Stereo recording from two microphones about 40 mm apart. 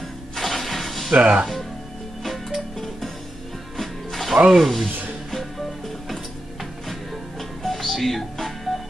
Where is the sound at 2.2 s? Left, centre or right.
Centre.